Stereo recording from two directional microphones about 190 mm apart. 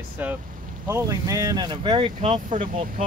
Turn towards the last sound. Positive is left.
turn(degrees=-45)  # may be behind; listen again after turning